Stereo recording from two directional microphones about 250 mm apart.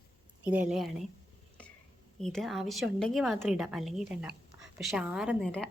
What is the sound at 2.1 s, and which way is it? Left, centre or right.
Speech, centre.